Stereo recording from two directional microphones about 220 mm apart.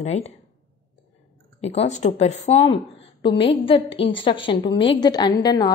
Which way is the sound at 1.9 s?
30° left (ahead or behind).